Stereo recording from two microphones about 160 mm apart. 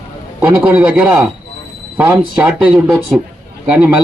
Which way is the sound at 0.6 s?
5° right (ahead or behind).